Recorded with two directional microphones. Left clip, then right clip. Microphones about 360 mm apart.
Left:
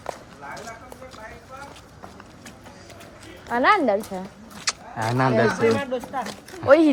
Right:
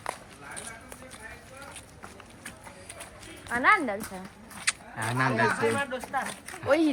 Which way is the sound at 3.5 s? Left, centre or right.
Left.